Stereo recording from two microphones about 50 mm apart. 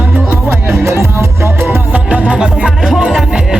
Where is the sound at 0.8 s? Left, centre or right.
Right.